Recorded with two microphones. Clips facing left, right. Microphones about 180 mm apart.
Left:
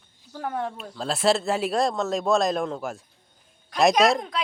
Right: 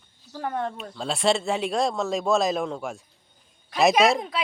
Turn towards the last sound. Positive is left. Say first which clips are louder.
# even
turn(degrees=-5)  # may be behind; listen again after turning